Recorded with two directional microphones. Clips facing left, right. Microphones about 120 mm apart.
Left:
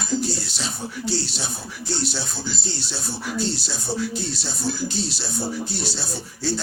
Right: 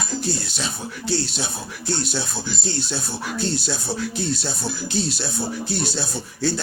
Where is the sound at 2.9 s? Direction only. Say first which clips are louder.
Right 1 dB; 55° right (ahead or behind).